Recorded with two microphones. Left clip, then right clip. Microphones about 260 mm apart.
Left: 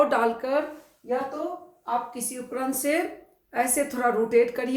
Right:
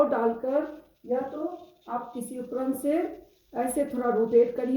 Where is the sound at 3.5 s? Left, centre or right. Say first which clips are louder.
Left 3 dB; left.